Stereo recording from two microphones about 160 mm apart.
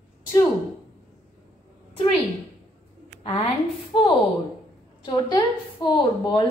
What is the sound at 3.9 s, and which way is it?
A woman's voice, 35° left (ahead or behind).